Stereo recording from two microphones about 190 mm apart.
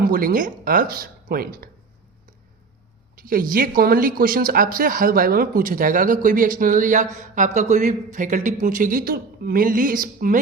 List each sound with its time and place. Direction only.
0.0 s speech: 50° right (ahead or behind)
3.2 s speech: 45° right (ahead or behind)